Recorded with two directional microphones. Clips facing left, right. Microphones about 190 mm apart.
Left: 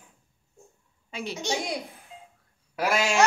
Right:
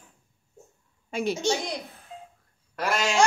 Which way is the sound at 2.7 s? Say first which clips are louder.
Left 1 dB; 5° left (ahead or behind).